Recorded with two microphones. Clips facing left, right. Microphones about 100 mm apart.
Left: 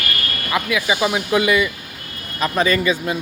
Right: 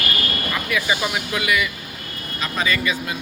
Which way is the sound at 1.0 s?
25° left (ahead or behind).